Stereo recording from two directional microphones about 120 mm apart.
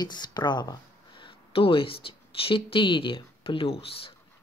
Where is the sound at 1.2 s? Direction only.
50° left (ahead or behind).